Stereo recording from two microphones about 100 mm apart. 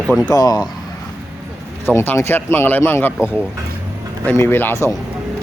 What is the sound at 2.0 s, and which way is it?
Speech, 25° left (ahead or behind).